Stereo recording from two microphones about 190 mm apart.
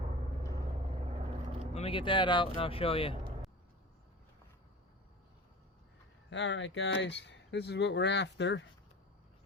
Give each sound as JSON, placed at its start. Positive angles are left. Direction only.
{"t": 1.7, "sound": "speech", "side_deg": 30}
{"t": 6.3, "sound": "speech", "side_deg": 75}